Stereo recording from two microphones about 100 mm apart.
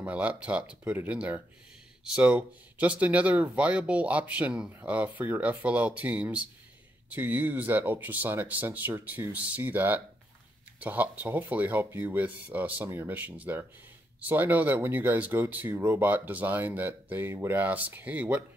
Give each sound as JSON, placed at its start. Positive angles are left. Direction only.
{"t": 0.0, "sound": "speech", "side_deg": -15}